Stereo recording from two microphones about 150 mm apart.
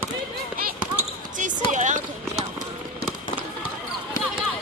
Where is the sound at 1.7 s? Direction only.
55° right (ahead or behind).